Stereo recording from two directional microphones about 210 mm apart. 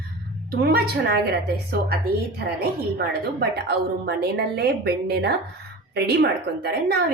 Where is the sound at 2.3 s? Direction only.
50° right (ahead or behind).